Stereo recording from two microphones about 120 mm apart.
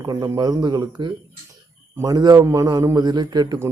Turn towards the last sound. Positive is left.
turn(degrees=-35)  # may be behind; listen again after turning